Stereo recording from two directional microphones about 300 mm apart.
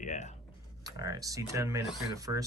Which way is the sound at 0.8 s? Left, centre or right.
Centre.